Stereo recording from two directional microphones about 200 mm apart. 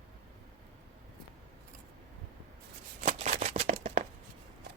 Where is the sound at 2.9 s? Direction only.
40° right (ahead or behind).